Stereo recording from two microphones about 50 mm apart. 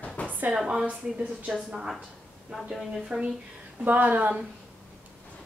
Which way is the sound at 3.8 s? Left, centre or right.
Right.